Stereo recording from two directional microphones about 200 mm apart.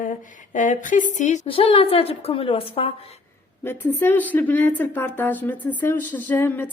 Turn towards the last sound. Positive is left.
turn(degrees=10)  # may be behind; listen again after turning